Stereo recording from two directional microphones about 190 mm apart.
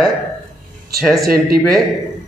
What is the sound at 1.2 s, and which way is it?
Speech, 50° right (ahead or behind).